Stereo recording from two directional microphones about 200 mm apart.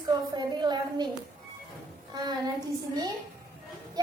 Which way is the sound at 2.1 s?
20° right (ahead or behind).